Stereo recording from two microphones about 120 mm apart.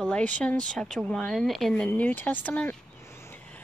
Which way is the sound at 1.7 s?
10° left (ahead or behind).